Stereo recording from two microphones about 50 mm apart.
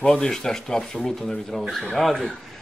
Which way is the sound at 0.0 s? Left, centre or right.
Centre.